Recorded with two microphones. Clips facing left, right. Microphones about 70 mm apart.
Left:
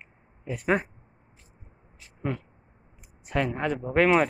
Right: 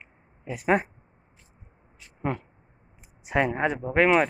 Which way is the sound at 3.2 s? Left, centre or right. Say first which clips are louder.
Right 3 dB; centre.